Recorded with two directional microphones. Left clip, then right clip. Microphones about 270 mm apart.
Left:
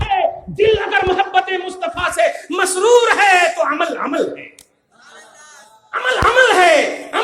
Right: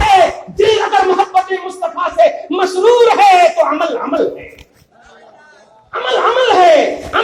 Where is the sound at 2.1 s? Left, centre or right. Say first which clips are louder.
Right 7 dB; left.